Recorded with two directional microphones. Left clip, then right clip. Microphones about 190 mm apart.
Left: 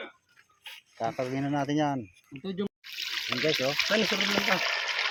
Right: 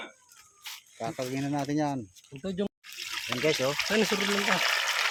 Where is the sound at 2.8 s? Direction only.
5° right (ahead or behind).